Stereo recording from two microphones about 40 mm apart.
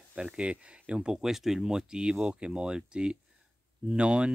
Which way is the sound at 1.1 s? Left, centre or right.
Centre.